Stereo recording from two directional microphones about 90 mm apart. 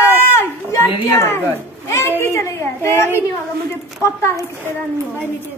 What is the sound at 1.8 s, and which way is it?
A child's voice, 25° left (ahead or behind).